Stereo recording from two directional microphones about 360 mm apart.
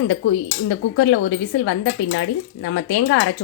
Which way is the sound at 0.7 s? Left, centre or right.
Left.